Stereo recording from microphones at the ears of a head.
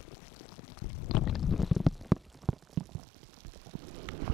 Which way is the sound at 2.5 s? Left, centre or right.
Right.